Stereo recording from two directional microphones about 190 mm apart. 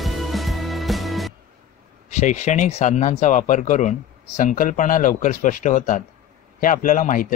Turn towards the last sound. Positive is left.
turn(degrees=45)  # may be behind; listen again after turning